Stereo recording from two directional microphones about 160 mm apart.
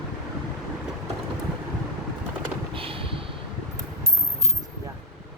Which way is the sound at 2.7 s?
35° right (ahead or behind).